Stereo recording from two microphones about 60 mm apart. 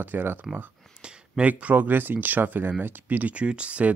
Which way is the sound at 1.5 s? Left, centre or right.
Right.